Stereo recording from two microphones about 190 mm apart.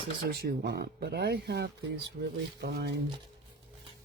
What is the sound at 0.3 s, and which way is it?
Speech, 55° right (ahead or behind).